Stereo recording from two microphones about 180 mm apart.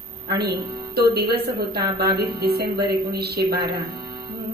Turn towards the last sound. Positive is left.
turn(degrees=-60)  # may be behind; listen again after turning